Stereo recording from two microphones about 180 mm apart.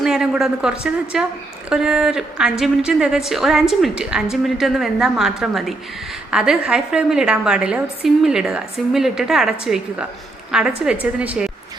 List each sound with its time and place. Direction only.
0.0 s a woman's voice: centre (ahead or behind)